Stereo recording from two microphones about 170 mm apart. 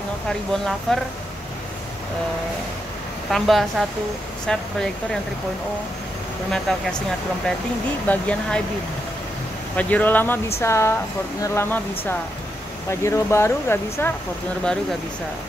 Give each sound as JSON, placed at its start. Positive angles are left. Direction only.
{"t": 0.3, "sound": "speech", "side_deg": 0}
{"t": 3.3, "sound": "speech", "side_deg": 0}
{"t": 6.7, "sound": "speech", "side_deg": 5}
{"t": 8.1, "sound": "speech", "side_deg": 5}
{"t": 9.8, "sound": "speech", "side_deg": 10}
{"t": 13.0, "sound": "speech", "side_deg": 15}